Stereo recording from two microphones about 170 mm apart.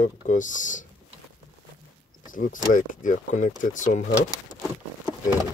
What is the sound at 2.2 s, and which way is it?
Speech, 50° left (ahead or behind).